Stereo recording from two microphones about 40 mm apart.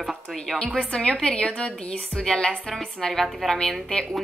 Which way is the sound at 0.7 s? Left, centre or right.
Left.